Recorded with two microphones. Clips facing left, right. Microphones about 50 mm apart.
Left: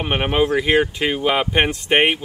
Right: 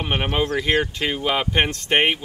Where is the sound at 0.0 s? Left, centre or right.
Centre.